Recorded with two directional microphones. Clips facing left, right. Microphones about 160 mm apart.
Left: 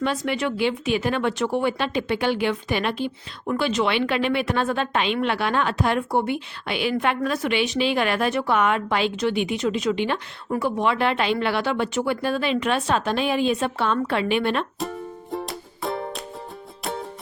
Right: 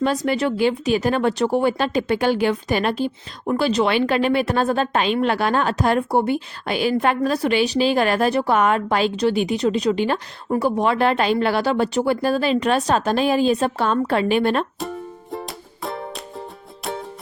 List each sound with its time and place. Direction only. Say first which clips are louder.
0.0 s a woman's voice: right 4 dB; 40° right (ahead or behind)
14.8 s music: right 1 dB; centre (ahead or behind)